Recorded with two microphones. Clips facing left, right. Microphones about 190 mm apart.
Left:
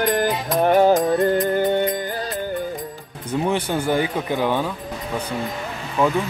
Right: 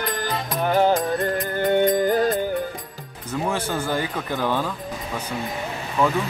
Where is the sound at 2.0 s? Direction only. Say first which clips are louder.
Right 8 dB; 45° right (ahead or behind).